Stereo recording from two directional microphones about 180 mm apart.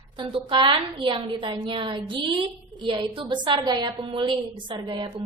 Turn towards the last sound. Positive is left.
turn(degrees=-25)  # may be behind; listen again after turning